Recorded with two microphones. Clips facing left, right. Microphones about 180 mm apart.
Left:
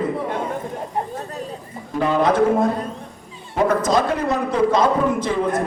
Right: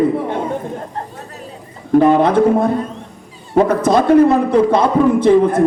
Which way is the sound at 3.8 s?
60° right (ahead or behind).